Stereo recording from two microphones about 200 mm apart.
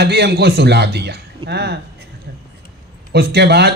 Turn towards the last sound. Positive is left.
turn(degrees=-55)  # may be behind; listen again after turning